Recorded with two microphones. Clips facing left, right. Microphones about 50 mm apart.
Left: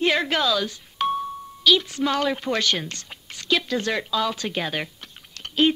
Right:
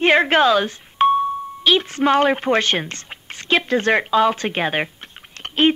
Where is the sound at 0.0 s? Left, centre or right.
Right.